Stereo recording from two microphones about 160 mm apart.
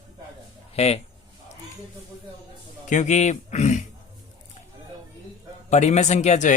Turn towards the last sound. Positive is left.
turn(degrees=45)  # may be behind; listen again after turning